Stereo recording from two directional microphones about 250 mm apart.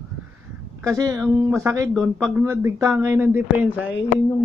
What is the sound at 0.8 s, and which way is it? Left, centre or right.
Speech, centre.